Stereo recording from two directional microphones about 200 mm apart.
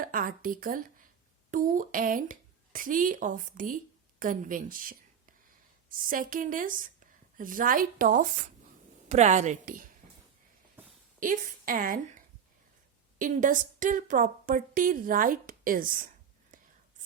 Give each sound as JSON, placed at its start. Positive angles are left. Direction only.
{"t": 0.0, "sound": "a woman's voice", "side_deg": -45}
{"t": 11.2, "sound": "a woman's voice", "side_deg": -45}
{"t": 13.1, "sound": "a woman's voice", "side_deg": -40}